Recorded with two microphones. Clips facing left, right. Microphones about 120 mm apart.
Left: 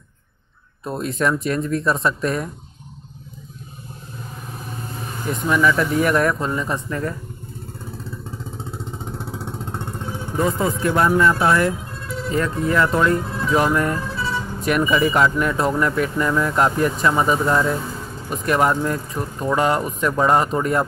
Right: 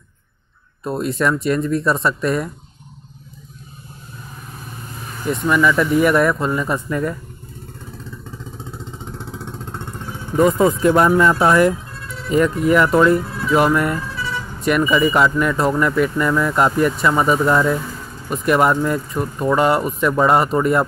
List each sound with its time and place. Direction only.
0.8 s speech: centre (ahead or behind)
5.3 s speech: centre (ahead or behind)
10.4 s speech: 20° right (ahead or behind); by 14.0 s centre (ahead or behind)
14.1 s vehicle: 30° left (ahead or behind)
14.9 s speech: centre (ahead or behind)